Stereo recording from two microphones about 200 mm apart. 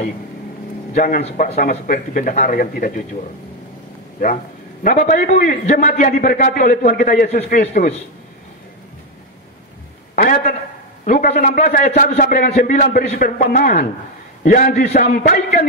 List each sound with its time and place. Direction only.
0.9 s a man's voice: 45° left (ahead or behind)
1.2 s a man's voice: 35° left (ahead or behind)
4.2 s a man's voice: 45° left (ahead or behind)
10.1 s a sound: 45° left (ahead or behind)
11.1 s a man's voice: 40° left (ahead or behind)